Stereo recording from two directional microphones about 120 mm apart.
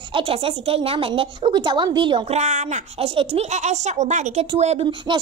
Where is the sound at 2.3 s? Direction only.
75° right (ahead or behind).